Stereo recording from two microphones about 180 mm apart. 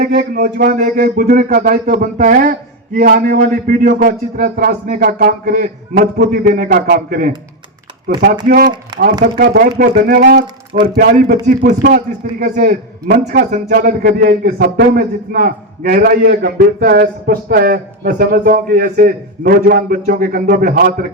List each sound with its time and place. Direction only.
0.0 s speech: 55° right (ahead or behind)
8.4 s speech: 50° right (ahead or behind)
10.4 s speech: 25° right (ahead or behind)
11.4 s speech: 50° right (ahead or behind)